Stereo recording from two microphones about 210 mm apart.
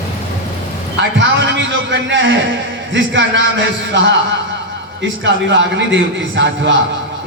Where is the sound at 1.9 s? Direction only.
60° right (ahead or behind).